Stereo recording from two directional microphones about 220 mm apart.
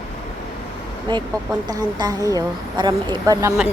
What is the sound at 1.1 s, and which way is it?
A woman's voice, 20° right (ahead or behind).